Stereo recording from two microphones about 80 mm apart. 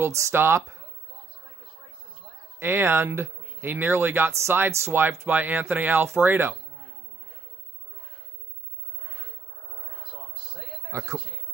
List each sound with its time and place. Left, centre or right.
0.0 s speech: right
2.6 s speech: right
10.9 s a man's voice: right